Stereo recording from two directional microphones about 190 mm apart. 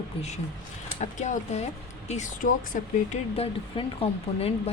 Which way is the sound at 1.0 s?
40° left (ahead or behind).